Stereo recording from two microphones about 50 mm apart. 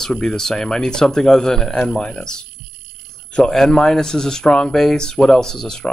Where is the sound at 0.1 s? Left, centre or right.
Centre.